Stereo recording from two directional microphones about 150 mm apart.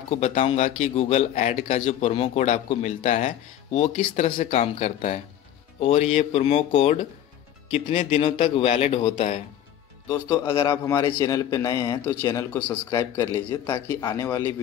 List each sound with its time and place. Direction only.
0.1 s a man's voice: 50° left (ahead or behind)
7.8 s speech: 50° left (ahead or behind)
10.1 s a man's voice: 25° left (ahead or behind)